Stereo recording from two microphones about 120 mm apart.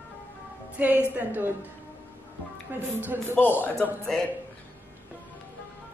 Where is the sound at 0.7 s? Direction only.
15° right (ahead or behind).